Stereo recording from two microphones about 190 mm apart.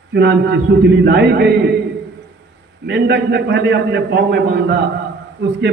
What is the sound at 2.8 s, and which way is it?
A man's voice, 60° right (ahead or behind).